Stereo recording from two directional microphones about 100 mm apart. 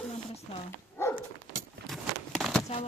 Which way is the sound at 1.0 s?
25° left (ahead or behind).